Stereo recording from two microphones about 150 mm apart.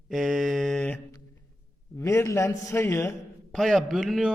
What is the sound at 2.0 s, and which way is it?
A man's voice, 20° left (ahead or behind).